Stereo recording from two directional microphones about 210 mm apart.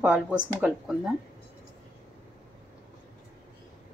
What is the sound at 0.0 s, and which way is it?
Speech, 5° right (ahead or behind).